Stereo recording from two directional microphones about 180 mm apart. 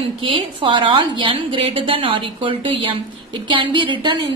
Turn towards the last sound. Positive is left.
turn(degrees=-25)  # may be behind; listen again after turning